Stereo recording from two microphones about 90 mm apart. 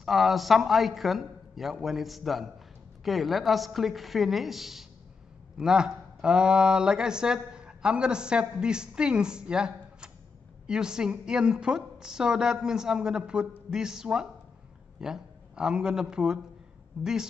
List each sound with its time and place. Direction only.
0.0 s a man's voice: centre (ahead or behind)